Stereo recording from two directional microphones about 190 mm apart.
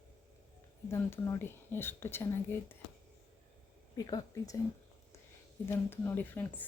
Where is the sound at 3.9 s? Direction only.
20° left (ahead or behind).